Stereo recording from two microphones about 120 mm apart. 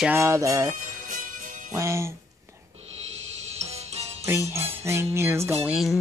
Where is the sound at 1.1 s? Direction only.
90° right.